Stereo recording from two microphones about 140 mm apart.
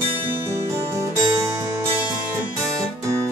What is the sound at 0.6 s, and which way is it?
Music, 20° right (ahead or behind).